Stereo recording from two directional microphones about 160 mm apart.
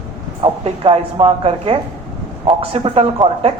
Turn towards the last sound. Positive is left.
turn(degrees=-40)  # may be behind; listen again after turning